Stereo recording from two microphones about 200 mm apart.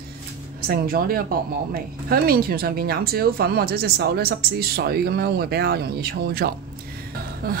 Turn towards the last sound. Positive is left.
turn(degrees=-50)  # may be behind; listen again after turning